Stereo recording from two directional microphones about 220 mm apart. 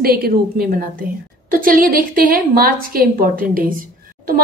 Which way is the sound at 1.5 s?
40° right (ahead or behind).